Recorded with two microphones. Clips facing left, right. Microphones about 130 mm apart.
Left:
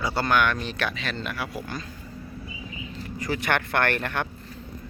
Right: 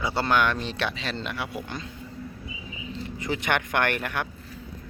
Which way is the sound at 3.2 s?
20° right (ahead or behind).